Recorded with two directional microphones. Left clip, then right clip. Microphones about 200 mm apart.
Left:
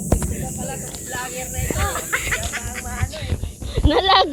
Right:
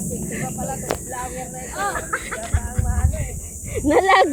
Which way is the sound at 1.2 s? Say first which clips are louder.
Left 1 dB; 35° right (ahead or behind).